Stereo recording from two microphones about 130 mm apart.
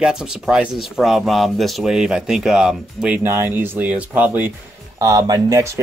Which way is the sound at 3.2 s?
15° right (ahead or behind).